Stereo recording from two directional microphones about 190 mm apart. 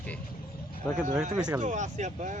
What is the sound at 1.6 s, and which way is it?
Speech, 40° right (ahead or behind).